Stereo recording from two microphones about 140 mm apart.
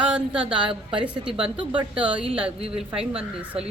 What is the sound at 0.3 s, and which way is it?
A woman's voice, 40° right (ahead or behind).